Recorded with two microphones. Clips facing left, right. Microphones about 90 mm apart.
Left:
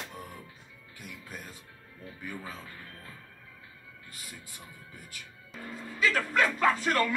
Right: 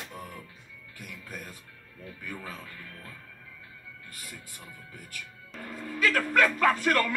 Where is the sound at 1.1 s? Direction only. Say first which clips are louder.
Right 2 dB; 50° right (ahead or behind).